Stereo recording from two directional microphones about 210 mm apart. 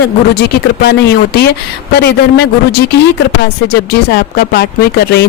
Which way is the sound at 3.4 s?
50° left (ahead or behind).